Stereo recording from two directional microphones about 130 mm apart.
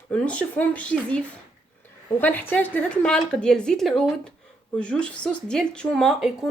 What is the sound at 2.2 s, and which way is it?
Speech, 15° left (ahead or behind).